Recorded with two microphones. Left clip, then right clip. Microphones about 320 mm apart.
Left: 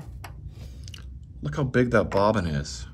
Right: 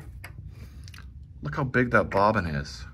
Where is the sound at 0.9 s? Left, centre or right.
Centre.